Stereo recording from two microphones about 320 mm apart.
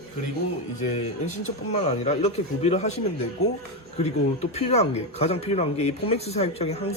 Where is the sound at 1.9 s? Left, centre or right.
Left.